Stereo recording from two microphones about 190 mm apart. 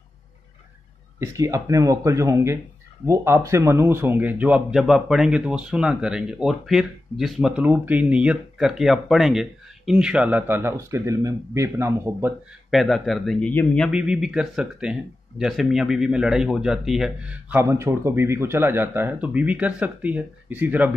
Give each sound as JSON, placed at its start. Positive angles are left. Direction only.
{"t": 1.2, "sound": "speech", "side_deg": -15}
{"t": 12.7, "sound": "speech", "side_deg": 0}